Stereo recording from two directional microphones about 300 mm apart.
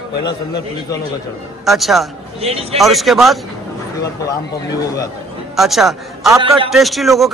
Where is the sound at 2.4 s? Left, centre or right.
Centre.